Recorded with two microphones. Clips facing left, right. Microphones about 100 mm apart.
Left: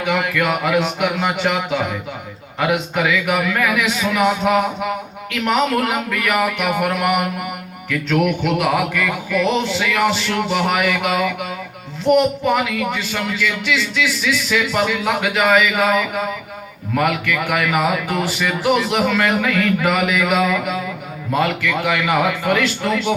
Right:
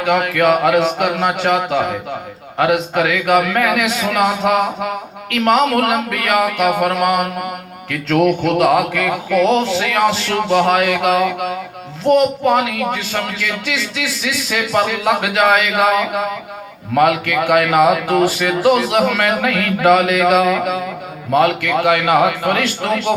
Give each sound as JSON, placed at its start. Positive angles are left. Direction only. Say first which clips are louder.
{"t": 0.0, "sound": "speech", "louder": "right 5 dB", "side_deg": -45}
{"t": 2.9, "sound": "a man's voice", "louder": "right 4 dB", "side_deg": -55}
{"t": 8.3, "sound": "speech", "louder": "right 5 dB", "side_deg": -40}
{"t": 8.7, "sound": "a man's voice", "louder": "right 4 dB", "side_deg": -60}
{"t": 9.0, "sound": "speech", "louder": "right 5 dB", "side_deg": -50}
{"t": 10.8, "sound": "a man's voice", "louder": "right 4 dB", "side_deg": -65}
{"t": 12.5, "sound": "a man's voice", "louder": "right 3 dB", "side_deg": -55}
{"t": 18.2, "sound": "speech", "louder": "right 6 dB", "side_deg": -45}
{"t": 18.4, "sound": "a man's voice", "louder": "right 4 dB", "side_deg": -60}